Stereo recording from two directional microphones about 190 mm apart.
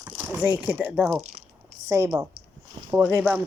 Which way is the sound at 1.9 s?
15° right (ahead or behind).